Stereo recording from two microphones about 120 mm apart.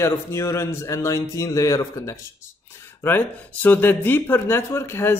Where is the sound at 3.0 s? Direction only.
15° left (ahead or behind).